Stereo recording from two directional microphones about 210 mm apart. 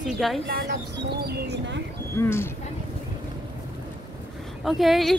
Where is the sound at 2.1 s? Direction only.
10° left (ahead or behind).